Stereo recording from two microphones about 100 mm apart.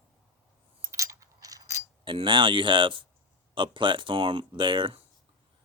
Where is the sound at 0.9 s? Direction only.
30° right (ahead or behind).